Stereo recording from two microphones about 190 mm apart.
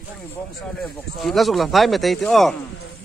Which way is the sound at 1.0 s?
Centre (ahead or behind).